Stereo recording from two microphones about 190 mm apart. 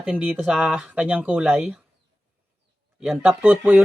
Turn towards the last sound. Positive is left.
turn(degrees=-10)  # may be behind; listen again after turning